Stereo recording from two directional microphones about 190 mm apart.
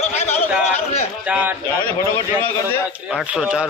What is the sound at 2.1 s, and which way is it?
Speech, 10° left (ahead or behind).